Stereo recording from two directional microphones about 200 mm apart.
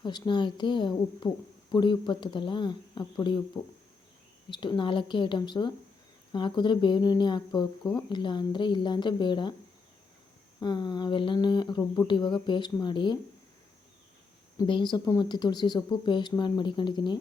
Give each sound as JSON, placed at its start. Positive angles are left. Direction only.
{"t": 0.0, "sound": "speech", "side_deg": 20}
{"t": 4.4, "sound": "speech", "side_deg": 25}
{"t": 10.6, "sound": "speech", "side_deg": 20}
{"t": 14.7, "sound": "speech", "side_deg": 25}